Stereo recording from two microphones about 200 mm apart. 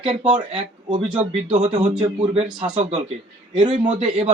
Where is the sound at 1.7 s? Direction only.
35° right (ahead or behind).